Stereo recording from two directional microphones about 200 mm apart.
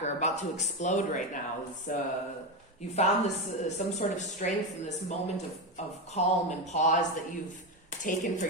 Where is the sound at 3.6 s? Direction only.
35° left (ahead or behind).